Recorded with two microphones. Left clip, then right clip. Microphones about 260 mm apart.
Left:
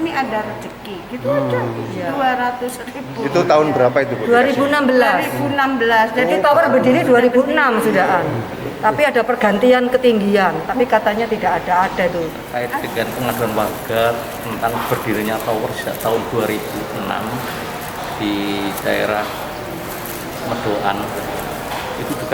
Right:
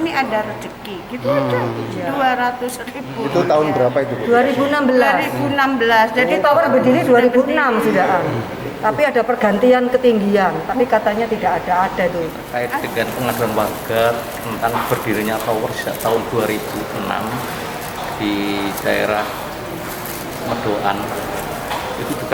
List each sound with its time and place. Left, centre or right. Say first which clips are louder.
0.0 s a sound: right 1 dB; centre
2.1 s a man's voice: right 1 dB; centre
18.2 s a man's voice: even; centre